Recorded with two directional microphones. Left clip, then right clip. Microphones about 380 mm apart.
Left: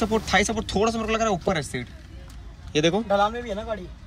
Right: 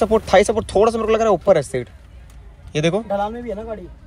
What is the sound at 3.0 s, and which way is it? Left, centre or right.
Speech, centre.